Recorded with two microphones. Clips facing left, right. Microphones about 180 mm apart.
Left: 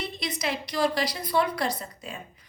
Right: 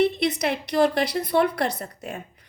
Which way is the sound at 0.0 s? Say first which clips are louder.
Right 10 dB; 60° right (ahead or behind).